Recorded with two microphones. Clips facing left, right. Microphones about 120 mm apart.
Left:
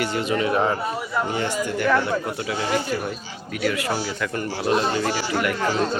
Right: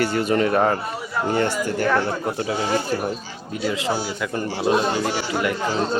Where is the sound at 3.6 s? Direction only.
20° right (ahead or behind).